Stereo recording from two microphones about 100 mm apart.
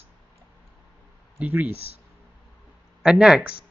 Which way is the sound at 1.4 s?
15° right (ahead or behind).